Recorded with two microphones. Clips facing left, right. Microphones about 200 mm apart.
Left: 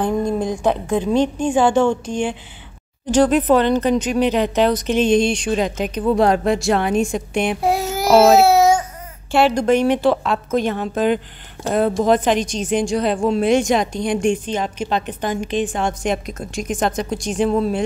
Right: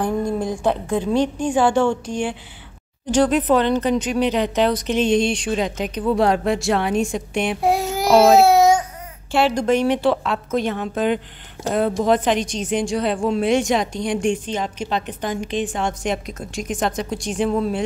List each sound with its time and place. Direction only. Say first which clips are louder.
0.0 s a woman's voice: left 2 dB; 20° left (ahead or behind)
3.2 s a woman's voice: left 2 dB; 50° left (ahead or behind)
7.6 s child singing: even; centre (ahead or behind)
8.2 s a sound: even; 5° left (ahead or behind)
9.3 s a woman's voice: left 2 dB; 55° left (ahead or behind); by 17.8 s 40° left (ahead or behind)